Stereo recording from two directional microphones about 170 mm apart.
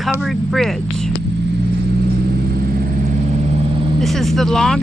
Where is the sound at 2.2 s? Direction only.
65° right (ahead or behind); by 3.9 s 40° right (ahead or behind).